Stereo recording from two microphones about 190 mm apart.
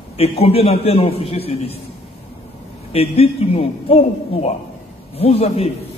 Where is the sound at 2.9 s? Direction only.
30° left (ahead or behind).